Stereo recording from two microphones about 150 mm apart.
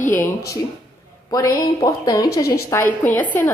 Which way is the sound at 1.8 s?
25° left (ahead or behind).